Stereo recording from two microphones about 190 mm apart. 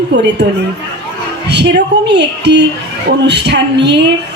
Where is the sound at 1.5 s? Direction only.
65° right (ahead or behind).